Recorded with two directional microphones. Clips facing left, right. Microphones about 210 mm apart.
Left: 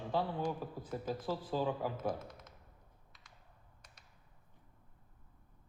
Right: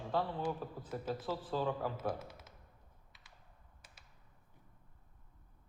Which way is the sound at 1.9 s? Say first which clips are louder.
Left 1 dB; 5° right (ahead or behind).